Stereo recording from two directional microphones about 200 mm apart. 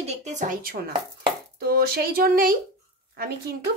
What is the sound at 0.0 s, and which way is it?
Speech, 35° right (ahead or behind).